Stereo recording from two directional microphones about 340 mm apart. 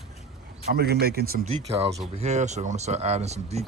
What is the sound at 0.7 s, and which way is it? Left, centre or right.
Speech, right.